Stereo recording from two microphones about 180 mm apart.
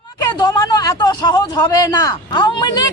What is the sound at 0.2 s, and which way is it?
Speech, 20° left (ahead or behind).